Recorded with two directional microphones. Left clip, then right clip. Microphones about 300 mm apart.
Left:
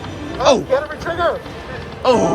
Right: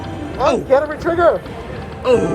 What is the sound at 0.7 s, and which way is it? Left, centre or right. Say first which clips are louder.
Speech: right 4 dB; centre.